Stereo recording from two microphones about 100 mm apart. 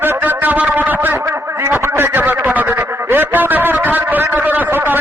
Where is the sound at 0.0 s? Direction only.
20° right (ahead or behind).